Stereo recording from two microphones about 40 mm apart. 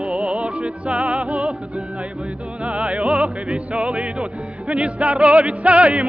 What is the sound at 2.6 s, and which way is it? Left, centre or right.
Music, right.